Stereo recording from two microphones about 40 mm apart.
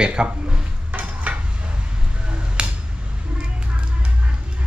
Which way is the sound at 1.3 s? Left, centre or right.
Right.